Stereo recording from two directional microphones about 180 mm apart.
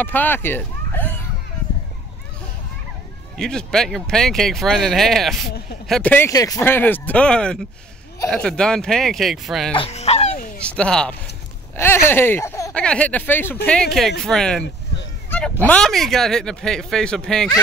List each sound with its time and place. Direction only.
0.0 s speech: 10° left (ahead or behind)
3.3 s speech: 5° left (ahead or behind)
9.8 s speech: 35° left (ahead or behind)
10.8 s speech: 5° left (ahead or behind)
12.7 s speech: 5° left (ahead or behind)
15.2 s a sound: 10° left (ahead or behind)
15.6 s speech: 5° left (ahead or behind)